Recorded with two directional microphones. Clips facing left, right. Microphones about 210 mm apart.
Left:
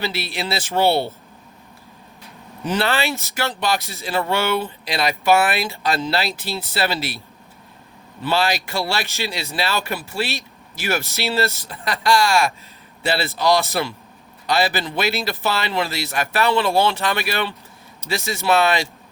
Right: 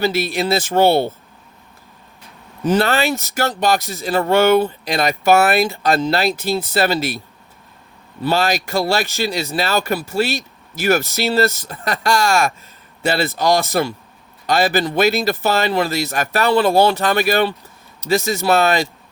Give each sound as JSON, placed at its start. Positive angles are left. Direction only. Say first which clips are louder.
{"t": 0.0, "sound": "speech", "louder": "right 7 dB", "side_deg": -45}
{"t": 2.6, "sound": "speech", "louder": "right 5 dB", "side_deg": -45}
{"t": 8.2, "sound": "speech", "louder": "right 3 dB", "side_deg": -45}